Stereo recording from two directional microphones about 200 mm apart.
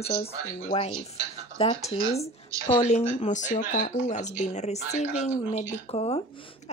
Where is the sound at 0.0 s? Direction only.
30° left (ahead or behind).